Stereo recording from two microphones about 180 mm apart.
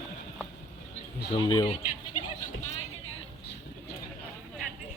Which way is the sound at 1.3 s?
30° left (ahead or behind).